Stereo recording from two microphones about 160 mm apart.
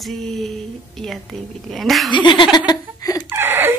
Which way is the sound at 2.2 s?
30° left (ahead or behind).